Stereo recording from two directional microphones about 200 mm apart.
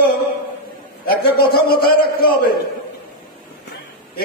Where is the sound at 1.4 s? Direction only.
50° left (ahead or behind).